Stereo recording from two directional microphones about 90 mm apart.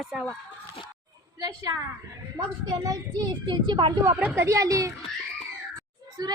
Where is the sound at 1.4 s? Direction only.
40° right (ahead or behind).